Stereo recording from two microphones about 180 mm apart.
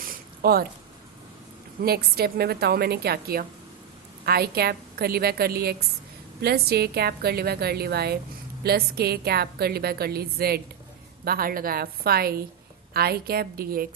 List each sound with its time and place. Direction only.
0.4 s a woman's voice: 60° right (ahead or behind)
1.8 s a woman's voice: 60° right (ahead or behind)